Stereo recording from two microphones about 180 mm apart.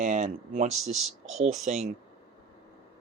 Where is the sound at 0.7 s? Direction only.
Centre (ahead or behind).